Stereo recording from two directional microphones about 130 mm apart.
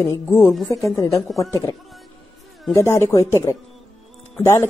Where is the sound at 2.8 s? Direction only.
20° left (ahead or behind).